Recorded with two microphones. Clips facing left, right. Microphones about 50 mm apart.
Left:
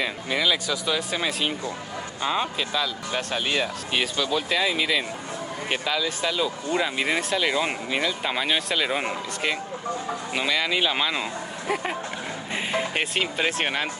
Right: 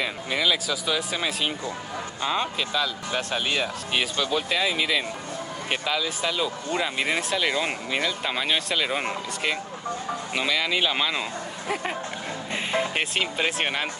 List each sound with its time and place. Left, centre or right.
0.0 s speech: centre